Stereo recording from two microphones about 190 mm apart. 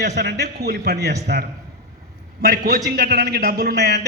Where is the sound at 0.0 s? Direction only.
60° right (ahead or behind).